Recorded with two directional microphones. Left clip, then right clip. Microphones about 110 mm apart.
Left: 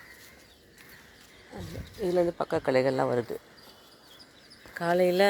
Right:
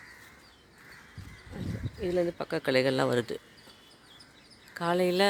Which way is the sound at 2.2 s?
15° right (ahead or behind).